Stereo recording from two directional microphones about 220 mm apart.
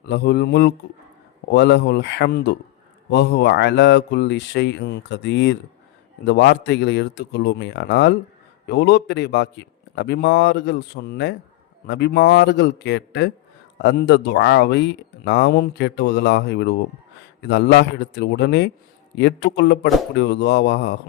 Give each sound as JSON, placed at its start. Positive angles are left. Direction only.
{"t": 0.0, "sound": "speech", "side_deg": 50}